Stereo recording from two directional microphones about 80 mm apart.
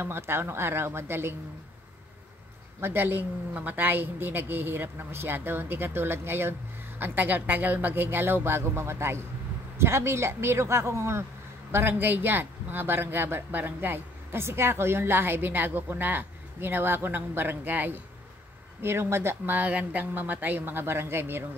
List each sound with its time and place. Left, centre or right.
0.0 s speech: right
2.8 s speech: right